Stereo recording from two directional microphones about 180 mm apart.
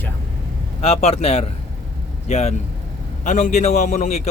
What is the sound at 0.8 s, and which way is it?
A man's voice, 35° left (ahead or behind).